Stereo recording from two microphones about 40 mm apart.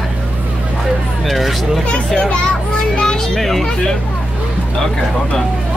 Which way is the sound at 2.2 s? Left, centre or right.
Left.